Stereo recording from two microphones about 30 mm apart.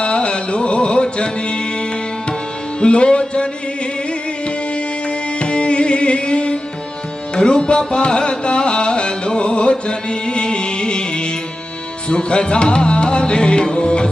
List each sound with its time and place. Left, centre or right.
0.0 s music: left